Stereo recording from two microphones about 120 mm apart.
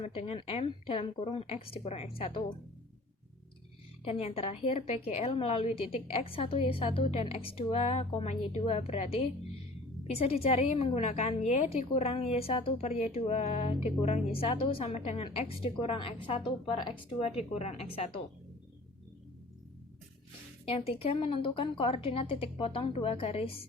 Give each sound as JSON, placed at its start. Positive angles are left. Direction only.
{"t": 0.0, "sound": "a woman's voice", "side_deg": 60}
{"t": 0.3, "sound": "a woman's voice", "side_deg": 50}
{"t": 4.0, "sound": "a woman's voice", "side_deg": 55}
{"t": 15.2, "sound": "a woman's voice", "side_deg": 50}
{"t": 17.2, "sound": "a woman's voice", "side_deg": 55}
{"t": 20.7, "sound": "a woman's voice", "side_deg": 50}